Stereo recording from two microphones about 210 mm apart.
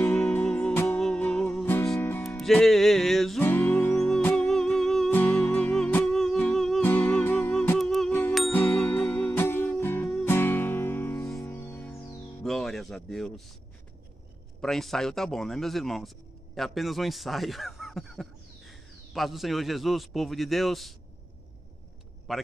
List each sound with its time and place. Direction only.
0.0 s music: 10° left (ahead or behind)
12.4 s a sound: centre (ahead or behind)
14.6 s a man's voice: centre (ahead or behind)
22.3 s speech: centre (ahead or behind)